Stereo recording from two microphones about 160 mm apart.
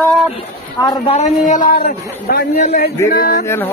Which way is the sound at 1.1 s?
45° left (ahead or behind).